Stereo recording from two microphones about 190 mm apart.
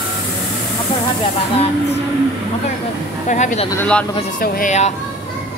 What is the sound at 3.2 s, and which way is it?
Speech, 40° left (ahead or behind).